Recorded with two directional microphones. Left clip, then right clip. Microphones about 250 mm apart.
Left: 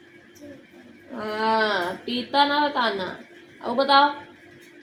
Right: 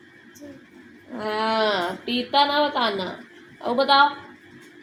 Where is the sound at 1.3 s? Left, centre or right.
Centre.